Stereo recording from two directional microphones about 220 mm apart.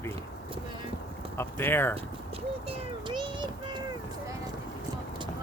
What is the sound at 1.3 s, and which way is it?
Speech, 10° left (ahead or behind).